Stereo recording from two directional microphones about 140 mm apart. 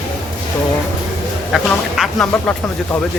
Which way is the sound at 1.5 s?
Centre (ahead or behind).